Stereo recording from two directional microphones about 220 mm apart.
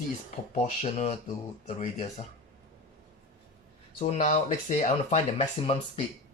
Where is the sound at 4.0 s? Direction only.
30° left (ahead or behind).